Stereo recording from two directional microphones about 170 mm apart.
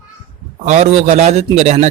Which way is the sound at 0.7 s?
40° right (ahead or behind).